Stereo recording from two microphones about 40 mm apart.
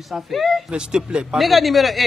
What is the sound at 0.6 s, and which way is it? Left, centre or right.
Speech, right.